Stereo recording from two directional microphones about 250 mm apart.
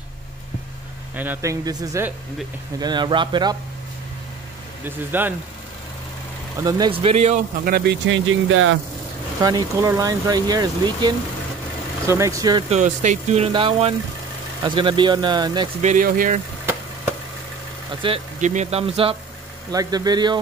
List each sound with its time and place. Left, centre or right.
1.1 s speech: centre
4.8 s speech: centre
6.6 s speech: centre; by 8.7 s right
9.4 s speech: centre
15.8 s speech: right
18.0 s speech: right